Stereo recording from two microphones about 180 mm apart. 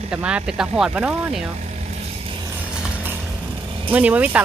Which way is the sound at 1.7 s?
35° right (ahead or behind).